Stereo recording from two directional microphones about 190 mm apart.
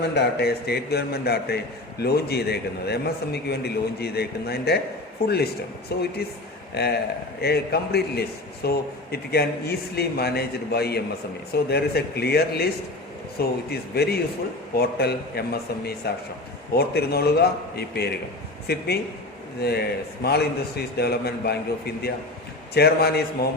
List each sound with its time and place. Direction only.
0.1 s a man's voice: 60° left (ahead or behind)